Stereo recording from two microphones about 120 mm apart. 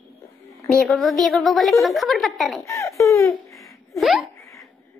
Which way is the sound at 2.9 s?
25° left (ahead or behind).